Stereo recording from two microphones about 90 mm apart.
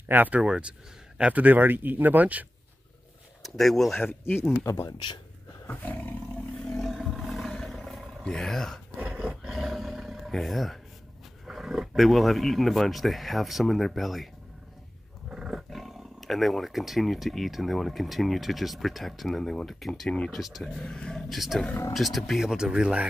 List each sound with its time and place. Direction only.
0.1 s speech: 20° right (ahead or behind)
0.4 s speech: 10° right (ahead or behind)
3.4 s speech: centre (ahead or behind)
4.0 s speech: 25° left (ahead or behind)
4.9 s speech: 65° left (ahead or behind)
5.7 s roar: 20° left (ahead or behind)
6.8 s roar: centre (ahead or behind)
8.2 s speech: 5° left (ahead or behind)
8.9 s roar: 15° right (ahead or behind)
11.4 s speech: 5° right (ahead or behind)
20.2 s speech: centre (ahead or behind)